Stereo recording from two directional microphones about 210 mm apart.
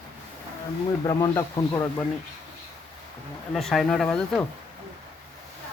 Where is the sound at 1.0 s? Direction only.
15° left (ahead or behind).